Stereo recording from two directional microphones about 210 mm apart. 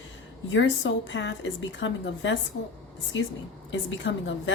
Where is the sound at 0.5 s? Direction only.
60° left (ahead or behind).